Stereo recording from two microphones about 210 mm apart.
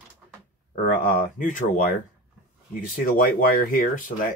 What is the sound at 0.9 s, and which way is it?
Speech, 40° left (ahead or behind).